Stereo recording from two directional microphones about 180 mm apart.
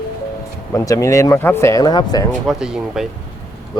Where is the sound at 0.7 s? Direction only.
20° left (ahead or behind).